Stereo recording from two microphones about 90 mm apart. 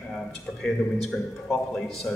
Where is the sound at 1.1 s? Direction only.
20° left (ahead or behind).